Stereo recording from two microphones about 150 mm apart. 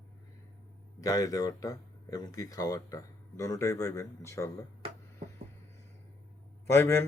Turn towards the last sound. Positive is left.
turn(degrees=15)  # may be behind; listen again after turning